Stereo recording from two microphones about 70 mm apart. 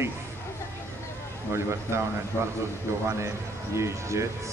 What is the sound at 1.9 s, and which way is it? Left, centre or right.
A man's voice, right.